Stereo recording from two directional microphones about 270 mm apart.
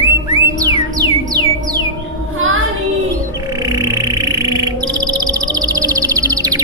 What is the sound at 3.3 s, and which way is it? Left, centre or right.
Music, centre.